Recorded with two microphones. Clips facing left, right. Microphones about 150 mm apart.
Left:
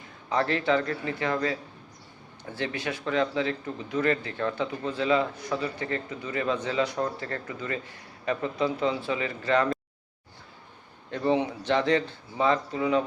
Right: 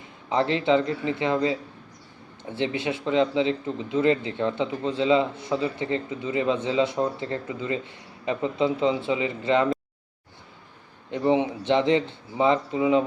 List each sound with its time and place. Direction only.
0.3 s a man's voice: 20° right (ahead or behind)
11.1 s a man's voice: 20° right (ahead or behind)